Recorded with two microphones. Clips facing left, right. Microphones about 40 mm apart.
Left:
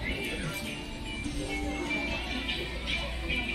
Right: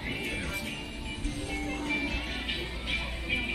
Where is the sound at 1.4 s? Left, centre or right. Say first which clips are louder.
Even; right.